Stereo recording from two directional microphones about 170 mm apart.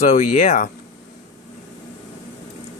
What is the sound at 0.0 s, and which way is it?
Speech, 45° left (ahead or behind).